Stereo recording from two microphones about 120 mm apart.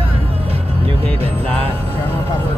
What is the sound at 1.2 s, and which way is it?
Music, 55° right (ahead or behind).